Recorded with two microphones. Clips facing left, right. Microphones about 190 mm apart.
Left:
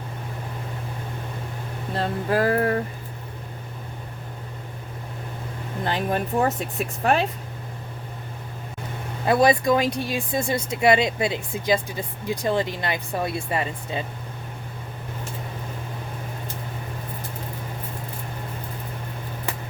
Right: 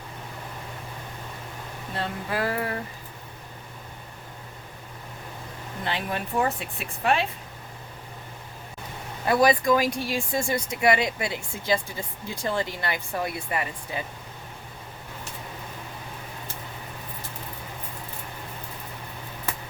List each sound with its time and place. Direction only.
2.0 s speech: 45° left (ahead or behind)
5.8 s speech: 45° left (ahead or behind)
9.2 s speech: 25° left (ahead or behind)